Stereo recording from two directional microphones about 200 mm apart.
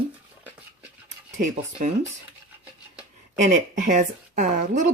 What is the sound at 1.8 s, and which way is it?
Speech, 40° right (ahead or behind).